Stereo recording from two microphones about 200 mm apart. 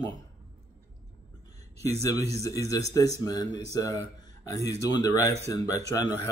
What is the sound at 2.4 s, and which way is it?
Speech, 15° left (ahead or behind).